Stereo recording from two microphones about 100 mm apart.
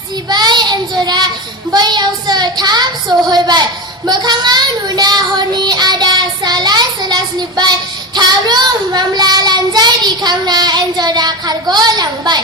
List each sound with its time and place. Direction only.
0.3 s child singing: 45° right (ahead or behind)
1.7 s speech: 45° right (ahead or behind)
5.6 s child singing: 45° right (ahead or behind)